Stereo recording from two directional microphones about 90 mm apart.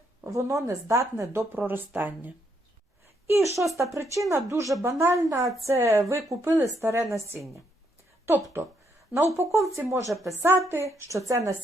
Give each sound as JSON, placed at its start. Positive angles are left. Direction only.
{"t": 0.3, "sound": "speech", "side_deg": -35}
{"t": 3.2, "sound": "speech", "side_deg": -30}
{"t": 9.1, "sound": "speech", "side_deg": -30}
{"t": 10.1, "sound": "a woman's voice", "side_deg": 0}
{"t": 10.3, "sound": "a woman's voice", "side_deg": -25}